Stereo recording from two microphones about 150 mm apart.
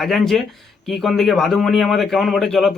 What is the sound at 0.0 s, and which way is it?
A man's voice, centre (ahead or behind).